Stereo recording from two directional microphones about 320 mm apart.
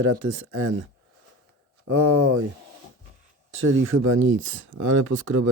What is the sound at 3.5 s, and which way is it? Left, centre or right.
Speech, right.